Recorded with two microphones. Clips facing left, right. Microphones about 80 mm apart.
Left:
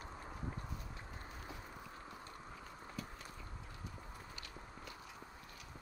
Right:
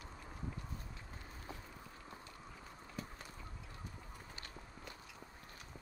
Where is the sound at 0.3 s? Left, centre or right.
Left.